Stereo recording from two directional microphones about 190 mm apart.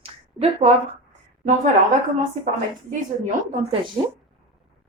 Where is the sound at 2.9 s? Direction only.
45° right (ahead or behind).